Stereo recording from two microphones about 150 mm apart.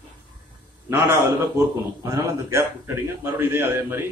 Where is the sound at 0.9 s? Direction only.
15° right (ahead or behind).